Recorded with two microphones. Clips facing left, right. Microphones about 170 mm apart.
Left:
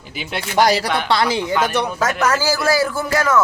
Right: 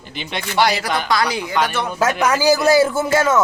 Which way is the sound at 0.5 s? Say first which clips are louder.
Left 2 dB; 40° left (ahead or behind).